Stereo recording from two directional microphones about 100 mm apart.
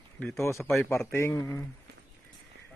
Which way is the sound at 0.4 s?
30° left (ahead or behind).